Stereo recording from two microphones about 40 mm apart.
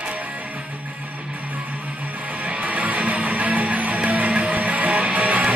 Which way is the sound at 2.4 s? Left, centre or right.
Right.